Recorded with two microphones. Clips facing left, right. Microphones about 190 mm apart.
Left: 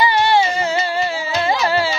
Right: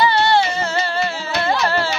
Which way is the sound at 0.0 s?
15° left (ahead or behind).